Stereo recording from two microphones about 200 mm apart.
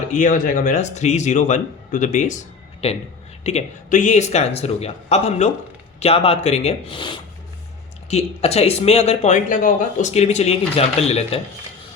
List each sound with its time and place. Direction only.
0.1 s speech: 40° left (ahead or behind)